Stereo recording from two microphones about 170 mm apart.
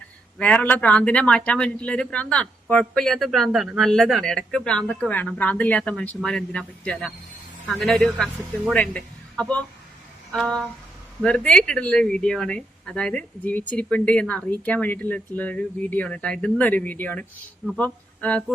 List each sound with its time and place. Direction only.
0.3 s a man's voice: 10° left (ahead or behind)